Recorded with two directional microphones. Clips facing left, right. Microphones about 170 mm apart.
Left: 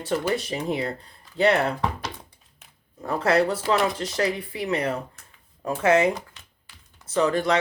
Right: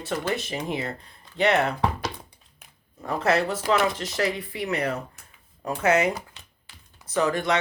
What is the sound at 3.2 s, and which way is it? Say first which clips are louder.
Speech: left 2 dB; 30° left (ahead or behind).